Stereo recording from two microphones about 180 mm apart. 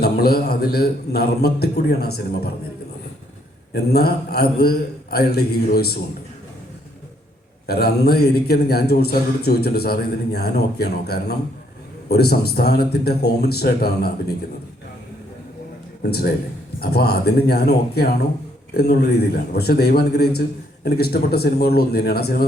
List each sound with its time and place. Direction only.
0.0 s a man's voice: 60° left (ahead or behind)
3.7 s a man's voice: 60° left (ahead or behind)
7.7 s a man's voice: 60° left (ahead or behind)
16.0 s a man's voice: 60° left (ahead or behind)